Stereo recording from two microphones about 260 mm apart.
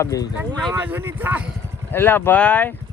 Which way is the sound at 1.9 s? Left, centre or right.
Centre.